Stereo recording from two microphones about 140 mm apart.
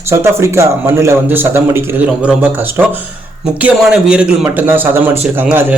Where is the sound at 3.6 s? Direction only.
5° right (ahead or behind).